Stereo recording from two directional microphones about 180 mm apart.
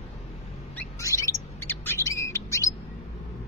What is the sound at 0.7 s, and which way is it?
Bird, 15° left (ahead or behind).